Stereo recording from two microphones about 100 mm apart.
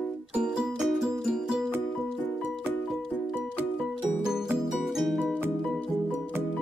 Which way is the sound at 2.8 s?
5° right (ahead or behind).